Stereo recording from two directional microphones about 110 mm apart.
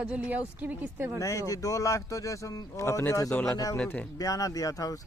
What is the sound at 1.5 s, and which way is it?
Speech, 30° left (ahead or behind).